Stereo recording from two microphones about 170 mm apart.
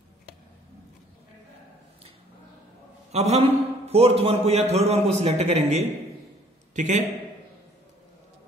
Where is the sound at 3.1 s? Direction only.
40° right (ahead or behind).